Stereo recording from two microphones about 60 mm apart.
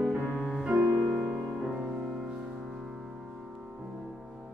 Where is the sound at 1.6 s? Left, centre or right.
Centre.